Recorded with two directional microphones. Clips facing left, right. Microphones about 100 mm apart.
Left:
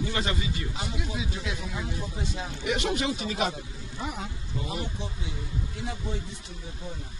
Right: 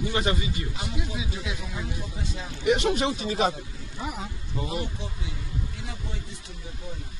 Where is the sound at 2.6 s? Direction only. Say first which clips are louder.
Right 5 dB; 30° right (ahead or behind).